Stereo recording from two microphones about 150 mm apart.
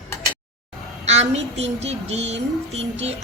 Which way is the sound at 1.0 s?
50° right (ahead or behind).